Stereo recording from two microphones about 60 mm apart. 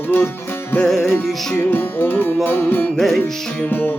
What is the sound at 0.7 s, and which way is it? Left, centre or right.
Music, centre.